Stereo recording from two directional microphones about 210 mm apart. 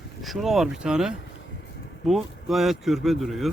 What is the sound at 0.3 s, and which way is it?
Speech, centre (ahead or behind).